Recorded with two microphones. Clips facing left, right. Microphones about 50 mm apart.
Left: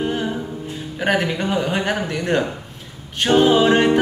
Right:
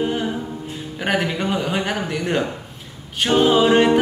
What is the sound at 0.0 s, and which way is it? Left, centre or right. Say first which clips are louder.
Music: even; centre.